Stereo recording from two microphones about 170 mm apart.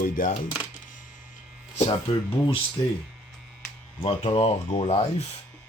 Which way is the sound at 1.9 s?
30° left (ahead or behind).